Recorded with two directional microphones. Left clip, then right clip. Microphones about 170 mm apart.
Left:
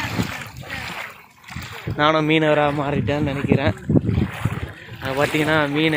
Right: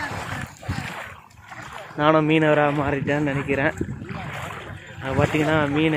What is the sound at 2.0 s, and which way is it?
Speech, centre (ahead or behind).